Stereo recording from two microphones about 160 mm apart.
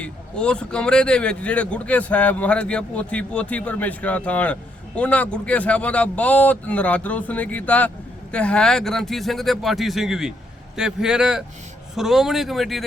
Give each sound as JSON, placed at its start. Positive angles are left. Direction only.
{"t": 0.0, "sound": "speech", "side_deg": 5}